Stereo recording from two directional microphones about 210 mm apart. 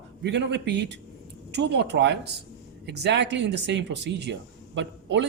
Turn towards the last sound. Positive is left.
turn(degrees=-55)  # may be behind; listen again after turning